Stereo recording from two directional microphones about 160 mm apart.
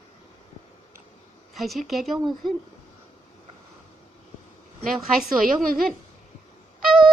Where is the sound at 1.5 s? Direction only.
Centre (ahead or behind).